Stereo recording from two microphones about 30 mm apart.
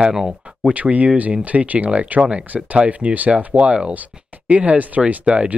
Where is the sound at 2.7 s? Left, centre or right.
Right.